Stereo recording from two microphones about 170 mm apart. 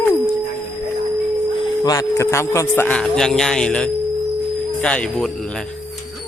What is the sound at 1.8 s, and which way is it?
A man's voice, 20° left (ahead or behind).